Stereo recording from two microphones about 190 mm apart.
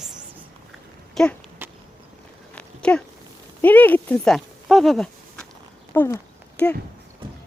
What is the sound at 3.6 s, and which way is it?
Speech, 10° left (ahead or behind).